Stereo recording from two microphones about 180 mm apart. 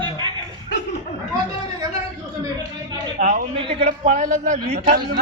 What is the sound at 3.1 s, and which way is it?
Speech, 50° right (ahead or behind).